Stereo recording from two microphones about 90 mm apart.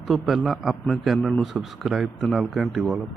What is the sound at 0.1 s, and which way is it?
A man's voice, centre (ahead or behind).